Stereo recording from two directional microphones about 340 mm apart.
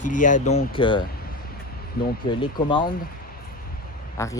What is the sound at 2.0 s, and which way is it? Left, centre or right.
Speech, left.